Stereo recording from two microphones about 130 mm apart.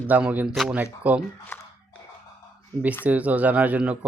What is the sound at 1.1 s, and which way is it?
Speech, 10° right (ahead or behind).